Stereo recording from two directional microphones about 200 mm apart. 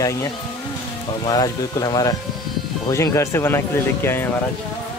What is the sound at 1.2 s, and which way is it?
Speech, 20° left (ahead or behind).